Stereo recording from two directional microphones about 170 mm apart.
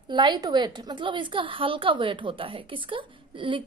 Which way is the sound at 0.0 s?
25° right (ahead or behind).